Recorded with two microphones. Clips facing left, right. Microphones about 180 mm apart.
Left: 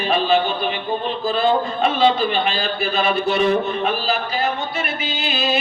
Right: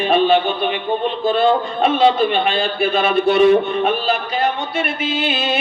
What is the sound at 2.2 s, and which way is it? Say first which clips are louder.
A man's voice: right 4 dB; 55° right (ahead or behind).